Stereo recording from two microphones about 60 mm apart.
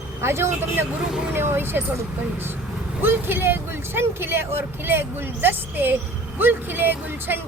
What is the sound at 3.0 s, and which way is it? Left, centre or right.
Speech, right.